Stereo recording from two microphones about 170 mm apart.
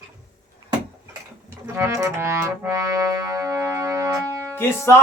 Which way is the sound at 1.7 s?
15° right (ahead or behind).